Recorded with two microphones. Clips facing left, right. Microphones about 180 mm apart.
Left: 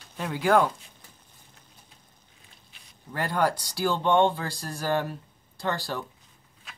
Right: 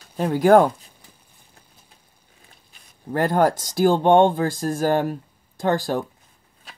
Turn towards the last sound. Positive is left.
turn(degrees=-45)  # may be behind; listen again after turning